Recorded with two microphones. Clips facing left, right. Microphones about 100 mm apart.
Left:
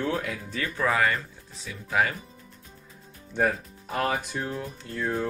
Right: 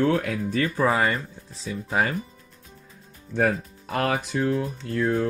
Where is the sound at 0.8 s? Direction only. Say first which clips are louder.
Right 1 dB; 25° right (ahead or behind).